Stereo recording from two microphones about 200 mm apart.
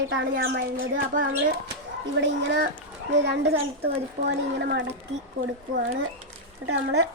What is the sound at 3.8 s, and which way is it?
A child's voice, 60° right (ahead or behind).